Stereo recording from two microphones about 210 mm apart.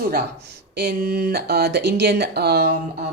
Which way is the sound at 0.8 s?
50° right (ahead or behind).